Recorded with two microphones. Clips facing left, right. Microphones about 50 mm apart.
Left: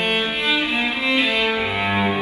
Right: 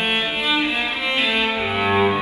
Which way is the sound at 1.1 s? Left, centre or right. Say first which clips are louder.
Even; right.